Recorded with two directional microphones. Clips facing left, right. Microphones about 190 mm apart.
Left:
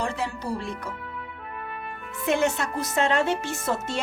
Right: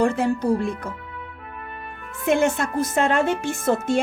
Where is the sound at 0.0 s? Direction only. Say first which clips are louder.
Right 9 dB; 50° right (ahead or behind).